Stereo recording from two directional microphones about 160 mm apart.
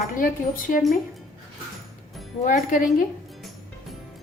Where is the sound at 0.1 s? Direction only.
60° left (ahead or behind).